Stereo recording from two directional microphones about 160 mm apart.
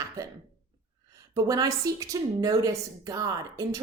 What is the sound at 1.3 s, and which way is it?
A woman's voice, 25° right (ahead or behind).